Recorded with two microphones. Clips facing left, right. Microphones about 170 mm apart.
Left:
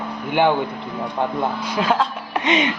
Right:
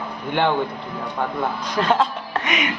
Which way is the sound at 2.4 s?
25° left (ahead or behind).